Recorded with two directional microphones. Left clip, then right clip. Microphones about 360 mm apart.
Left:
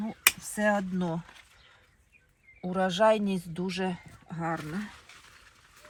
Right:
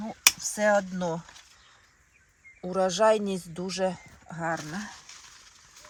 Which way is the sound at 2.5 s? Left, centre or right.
Right.